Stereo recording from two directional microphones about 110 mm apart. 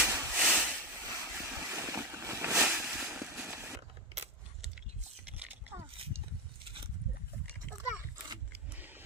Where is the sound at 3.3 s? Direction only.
20° right (ahead or behind).